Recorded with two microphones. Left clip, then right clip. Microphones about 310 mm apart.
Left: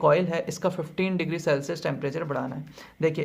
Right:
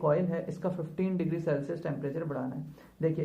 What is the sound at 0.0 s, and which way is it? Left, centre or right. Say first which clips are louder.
Speech: left 7 dB; left.